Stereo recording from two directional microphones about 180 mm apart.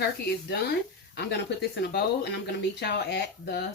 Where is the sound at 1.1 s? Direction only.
70° left (ahead or behind).